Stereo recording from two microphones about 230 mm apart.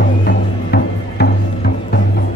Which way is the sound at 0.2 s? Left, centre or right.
Left.